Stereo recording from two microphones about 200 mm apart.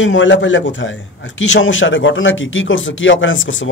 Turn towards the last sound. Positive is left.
turn(degrees=75)  # may be behind; listen again after turning